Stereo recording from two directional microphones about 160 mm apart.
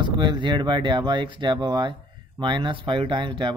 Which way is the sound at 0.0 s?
30° right (ahead or behind).